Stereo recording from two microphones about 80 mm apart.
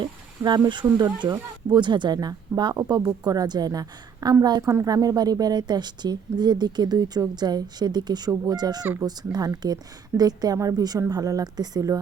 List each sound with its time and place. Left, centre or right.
0.0 s a woman's voice: right
4.6 s a woman's voice: right